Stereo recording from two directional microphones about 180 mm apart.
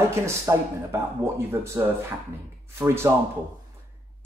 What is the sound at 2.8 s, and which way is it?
Speech, 15° right (ahead or behind).